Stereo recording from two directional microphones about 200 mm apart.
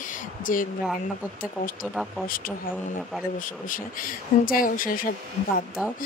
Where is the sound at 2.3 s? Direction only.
45° left (ahead or behind).